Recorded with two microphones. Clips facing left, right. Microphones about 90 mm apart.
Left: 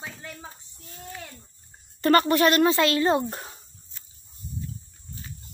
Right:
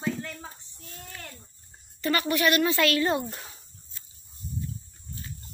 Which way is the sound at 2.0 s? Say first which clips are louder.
Left 7 dB; 45° left (ahead or behind).